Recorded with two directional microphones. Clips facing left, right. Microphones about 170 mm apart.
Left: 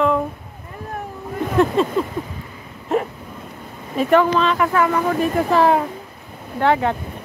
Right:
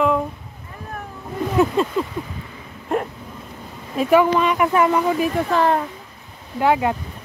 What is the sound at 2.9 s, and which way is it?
Hiccup, centre (ahead or behind).